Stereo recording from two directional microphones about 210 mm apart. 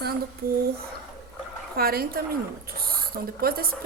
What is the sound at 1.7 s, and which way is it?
A woman's voice, 45° right (ahead or behind).